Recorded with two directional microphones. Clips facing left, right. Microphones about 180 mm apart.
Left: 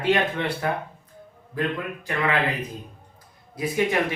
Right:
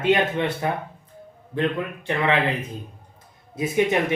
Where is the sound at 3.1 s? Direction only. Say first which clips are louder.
Right 5 dB; 25° right (ahead or behind).